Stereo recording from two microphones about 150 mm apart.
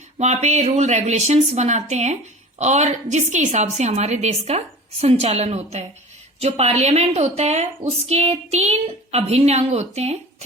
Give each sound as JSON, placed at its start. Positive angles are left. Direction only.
{"t": 0.2, "sound": "a woman's voice", "side_deg": -50}